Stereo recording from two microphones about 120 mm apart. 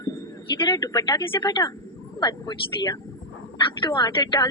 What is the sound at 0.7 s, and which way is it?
A woman's voice, 35° left (ahead or behind).